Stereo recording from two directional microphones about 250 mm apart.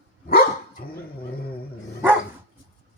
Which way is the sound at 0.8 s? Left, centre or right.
Left.